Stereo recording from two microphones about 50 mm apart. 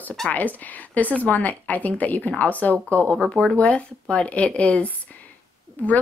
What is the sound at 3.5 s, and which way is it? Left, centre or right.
Speech, left.